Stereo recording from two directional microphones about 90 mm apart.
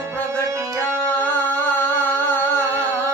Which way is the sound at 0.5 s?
30° right (ahead or behind).